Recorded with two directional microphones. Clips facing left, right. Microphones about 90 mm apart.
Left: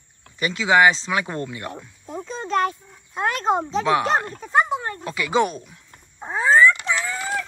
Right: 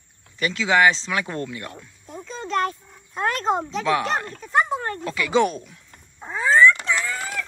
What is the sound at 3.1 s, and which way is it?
Speech, 15° left (ahead or behind).